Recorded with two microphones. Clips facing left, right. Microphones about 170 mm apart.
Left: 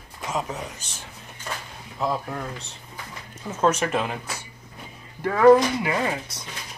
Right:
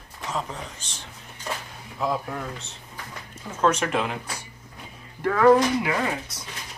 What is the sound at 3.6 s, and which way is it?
Speech, 5° left (ahead or behind).